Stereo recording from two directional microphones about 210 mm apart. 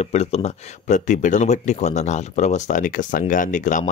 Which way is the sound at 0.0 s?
30° left (ahead or behind).